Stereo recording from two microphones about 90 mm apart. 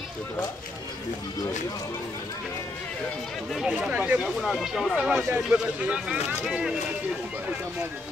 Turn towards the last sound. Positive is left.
turn(degrees=-5)  # may be behind; listen again after turning